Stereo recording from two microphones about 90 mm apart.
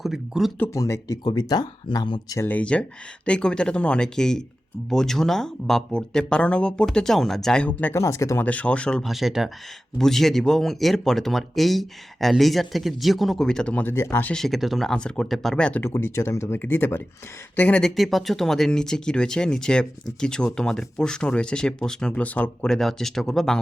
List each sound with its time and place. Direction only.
0.0 s speech: 5° right (ahead or behind)
0.7 s speech: 35° left (ahead or behind); by 2.4 s 50° left (ahead or behind)
2.4 s speech: 15° left (ahead or behind)
7.9 s speech: 35° left (ahead or behind)
8.4 s speech: 15° left (ahead or behind)
9.0 s speech: 5° right (ahead or behind)
13.8 s speech: 30° left (ahead or behind)
14.3 s speech: centre (ahead or behind)
15.8 s speech: 30° left (ahead or behind)
22.6 s speech: 5° left (ahead or behind)